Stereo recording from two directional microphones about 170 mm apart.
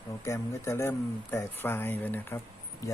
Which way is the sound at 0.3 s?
15° left (ahead or behind).